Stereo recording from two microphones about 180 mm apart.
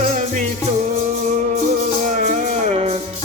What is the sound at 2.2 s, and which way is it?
Music, 45° right (ahead or behind).